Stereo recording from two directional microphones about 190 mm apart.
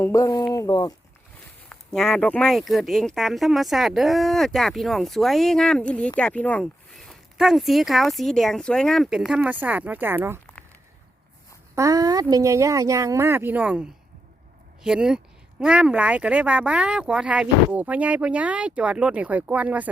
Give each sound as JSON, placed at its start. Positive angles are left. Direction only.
{"t": 0.0, "sound": "speech", "side_deg": 15}
{"t": 1.7, "sound": "speech", "side_deg": 5}
{"t": 11.7, "sound": "speech", "side_deg": -15}